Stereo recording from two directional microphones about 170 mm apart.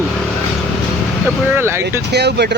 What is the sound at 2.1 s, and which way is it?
Speech, 75° right (ahead or behind).